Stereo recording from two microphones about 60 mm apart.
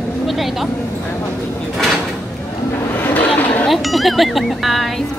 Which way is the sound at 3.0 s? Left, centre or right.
Left.